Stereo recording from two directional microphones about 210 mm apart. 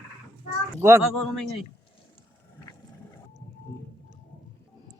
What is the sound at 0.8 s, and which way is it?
Speech, 10° right (ahead or behind).